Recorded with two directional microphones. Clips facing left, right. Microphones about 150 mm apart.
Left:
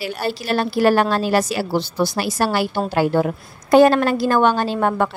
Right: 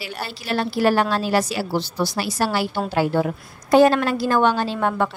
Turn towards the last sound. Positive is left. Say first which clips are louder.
# left 3 dB
turn(degrees=45)  # may be behind; listen again after turning